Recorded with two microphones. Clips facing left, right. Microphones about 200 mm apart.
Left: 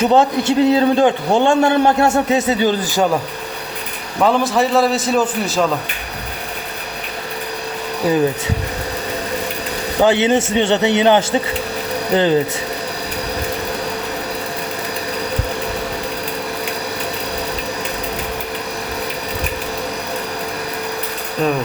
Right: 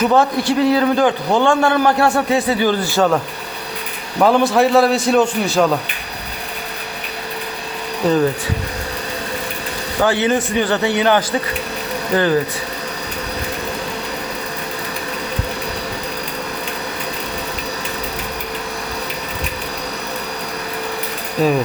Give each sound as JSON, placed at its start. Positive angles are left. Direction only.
{"t": 0.0, "sound": "a man's voice", "side_deg": 25}
{"t": 4.2, "sound": "a man's voice", "side_deg": 0}
{"t": 10.0, "sound": "a man's voice", "side_deg": 20}
{"t": 21.4, "sound": "a man's voice", "side_deg": -5}